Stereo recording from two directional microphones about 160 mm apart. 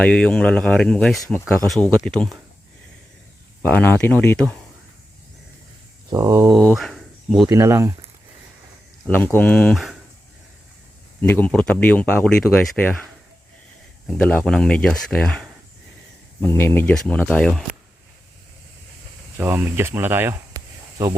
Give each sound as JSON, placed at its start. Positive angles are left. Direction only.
{"t": 0.0, "sound": "speech", "side_deg": 5}
{"t": 3.6, "sound": "speech", "side_deg": 10}
{"t": 6.1, "sound": "speech", "side_deg": -20}
{"t": 6.7, "sound": "a sound", "side_deg": 0}
{"t": 7.4, "sound": "speech", "side_deg": -20}
{"t": 9.0, "sound": "speech", "side_deg": 10}
{"t": 9.7, "sound": "speech", "side_deg": 0}
{"t": 11.2, "sound": "speech", "side_deg": 10}
{"t": 14.1, "sound": "speech", "side_deg": 5}
{"t": 16.4, "sound": "speech", "side_deg": 15}
{"t": 19.4, "sound": "speech", "side_deg": -15}